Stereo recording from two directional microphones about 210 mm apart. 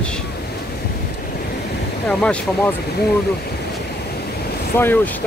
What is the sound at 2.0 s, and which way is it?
Speech, 5° left (ahead or behind).